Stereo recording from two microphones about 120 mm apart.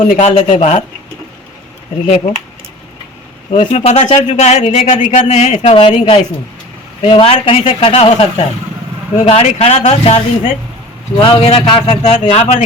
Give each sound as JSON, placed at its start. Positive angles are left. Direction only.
{"t": 0.0, "sound": "speech", "side_deg": 60}
{"t": 0.5, "sound": "speech", "side_deg": 75}
{"t": 3.5, "sound": "speech", "side_deg": 90}
{"t": 3.8, "sound": "speech", "side_deg": 70}
{"t": 4.7, "sound": "speech", "side_deg": 80}
{"t": 5.3, "sound": "speech", "side_deg": 70}
{"t": 5.7, "sound": "speech", "side_deg": 50}
{"t": 11.2, "sound": "speech", "side_deg": 50}